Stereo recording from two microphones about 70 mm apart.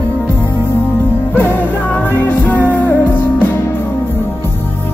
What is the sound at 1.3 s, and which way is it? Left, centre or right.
Music, left.